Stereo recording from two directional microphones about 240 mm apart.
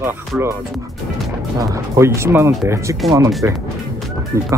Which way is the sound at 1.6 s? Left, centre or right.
Centre.